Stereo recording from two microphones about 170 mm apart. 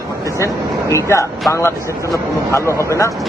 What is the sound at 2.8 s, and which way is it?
Speech, 15° left (ahead or behind).